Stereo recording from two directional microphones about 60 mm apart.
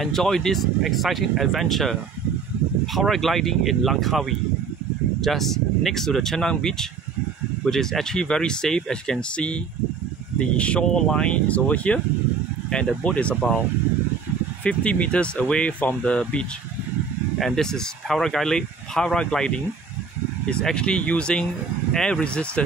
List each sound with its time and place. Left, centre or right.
0.0 s speech: centre; by 12.0 s left
13.0 s speech: left
14.6 s speech: centre
17.4 s speech: centre